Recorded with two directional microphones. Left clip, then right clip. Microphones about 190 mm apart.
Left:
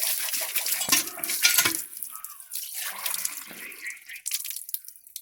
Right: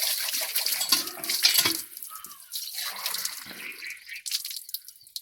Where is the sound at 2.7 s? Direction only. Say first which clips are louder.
Right 1 dB; centre (ahead or behind).